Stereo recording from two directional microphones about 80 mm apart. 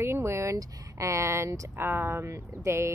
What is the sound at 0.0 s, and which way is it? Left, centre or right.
A woman's voice, right.